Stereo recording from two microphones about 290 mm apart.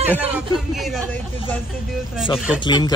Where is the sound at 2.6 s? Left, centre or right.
Centre.